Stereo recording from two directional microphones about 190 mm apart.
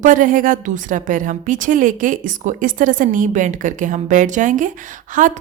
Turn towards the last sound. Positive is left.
turn(degrees=-40)  # may be behind; listen again after turning